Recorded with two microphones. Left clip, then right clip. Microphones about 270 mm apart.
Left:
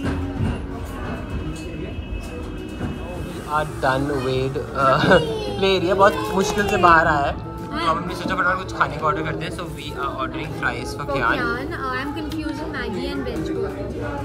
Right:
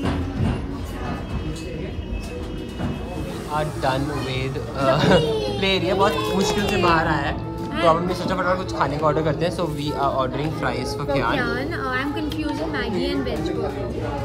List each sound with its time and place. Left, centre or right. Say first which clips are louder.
3.5 s speech: left 2 dB; centre
8.1 s a man's voice: left 1 dB; centre
11.3 s a woman's voice: even; centre